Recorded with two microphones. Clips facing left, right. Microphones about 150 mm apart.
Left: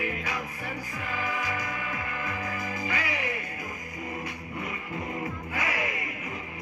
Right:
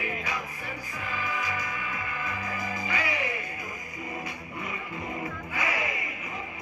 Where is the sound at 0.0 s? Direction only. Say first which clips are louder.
Left 1 dB; 55° left (ahead or behind).